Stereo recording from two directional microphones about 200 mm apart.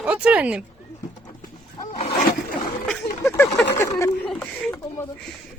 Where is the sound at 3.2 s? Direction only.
15° left (ahead or behind).